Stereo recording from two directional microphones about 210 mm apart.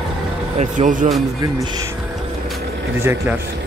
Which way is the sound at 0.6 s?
35° right (ahead or behind).